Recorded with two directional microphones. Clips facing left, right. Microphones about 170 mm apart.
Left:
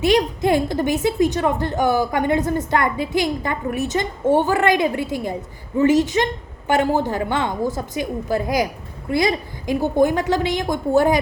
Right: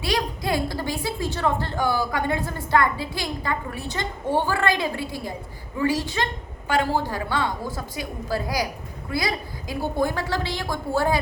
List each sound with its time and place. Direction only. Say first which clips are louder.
0.0 s a child's voice: left 9 dB; 20° left (ahead or behind)